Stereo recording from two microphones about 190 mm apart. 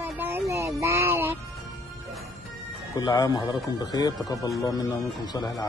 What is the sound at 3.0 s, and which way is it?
Speech, 20° left (ahead or behind).